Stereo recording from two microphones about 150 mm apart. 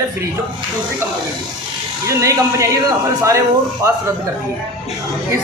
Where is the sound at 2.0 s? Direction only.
20° right (ahead or behind).